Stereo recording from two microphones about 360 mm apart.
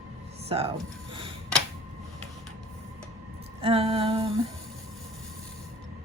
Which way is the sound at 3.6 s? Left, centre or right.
Centre.